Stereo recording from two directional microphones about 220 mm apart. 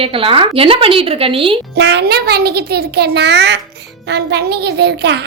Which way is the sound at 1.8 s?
50° right (ahead or behind).